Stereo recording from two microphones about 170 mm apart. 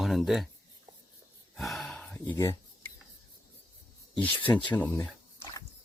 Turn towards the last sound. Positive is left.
turn(degrees=15)  # may be behind; listen again after turning